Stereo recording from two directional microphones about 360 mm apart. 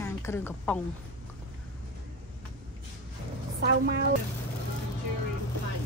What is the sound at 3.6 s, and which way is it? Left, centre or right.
Speech, right.